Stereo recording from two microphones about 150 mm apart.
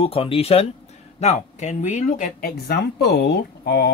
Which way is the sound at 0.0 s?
40° left (ahead or behind).